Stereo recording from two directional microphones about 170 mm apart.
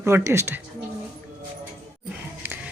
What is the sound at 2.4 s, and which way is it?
Music, 10° right (ahead or behind).